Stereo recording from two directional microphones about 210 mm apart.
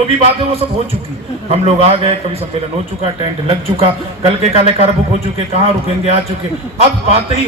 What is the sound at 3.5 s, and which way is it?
A man's voice, 25° right (ahead or behind).